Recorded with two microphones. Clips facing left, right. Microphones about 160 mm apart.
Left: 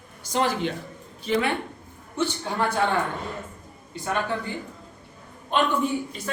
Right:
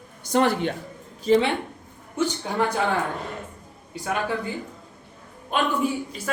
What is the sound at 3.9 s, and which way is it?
Speech, 10° right (ahead or behind).